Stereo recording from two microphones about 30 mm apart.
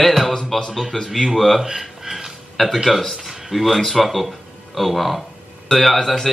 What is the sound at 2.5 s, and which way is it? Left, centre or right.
Speech, centre.